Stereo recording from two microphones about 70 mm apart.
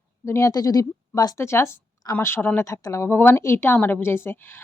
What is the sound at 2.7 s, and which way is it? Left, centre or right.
Speech, left.